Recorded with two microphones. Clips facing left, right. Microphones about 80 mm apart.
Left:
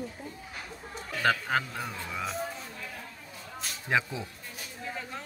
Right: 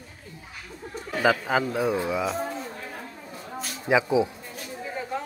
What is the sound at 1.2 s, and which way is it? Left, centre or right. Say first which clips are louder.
A man's voice: right 5 dB; centre.